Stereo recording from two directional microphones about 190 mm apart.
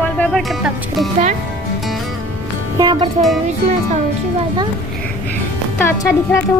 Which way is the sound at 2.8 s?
20° right (ahead or behind).